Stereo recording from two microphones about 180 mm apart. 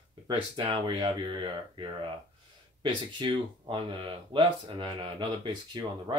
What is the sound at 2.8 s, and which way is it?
Speech, 25° right (ahead or behind).